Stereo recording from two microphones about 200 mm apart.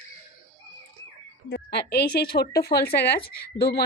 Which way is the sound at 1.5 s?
55° left (ahead or behind).